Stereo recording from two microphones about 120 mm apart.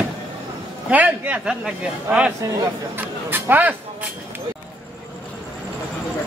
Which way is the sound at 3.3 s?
15° right (ahead or behind).